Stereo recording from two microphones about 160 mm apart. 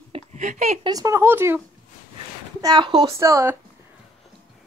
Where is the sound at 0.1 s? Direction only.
45° right (ahead or behind).